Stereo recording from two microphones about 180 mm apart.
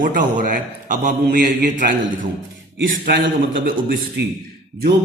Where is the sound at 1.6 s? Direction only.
55° right (ahead or behind).